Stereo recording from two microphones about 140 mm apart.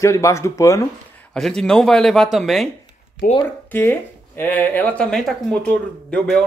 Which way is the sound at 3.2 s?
90° left.